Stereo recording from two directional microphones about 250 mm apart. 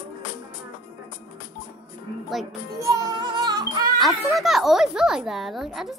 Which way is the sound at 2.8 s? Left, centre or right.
Centre.